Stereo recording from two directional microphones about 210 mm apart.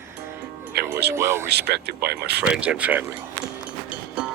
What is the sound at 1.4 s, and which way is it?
Speech, 50° right (ahead or behind).